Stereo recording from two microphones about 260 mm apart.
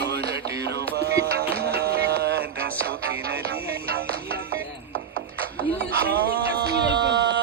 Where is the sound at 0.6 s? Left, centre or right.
Right.